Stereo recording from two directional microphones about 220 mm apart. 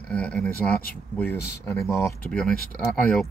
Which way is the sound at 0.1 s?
5° left (ahead or behind).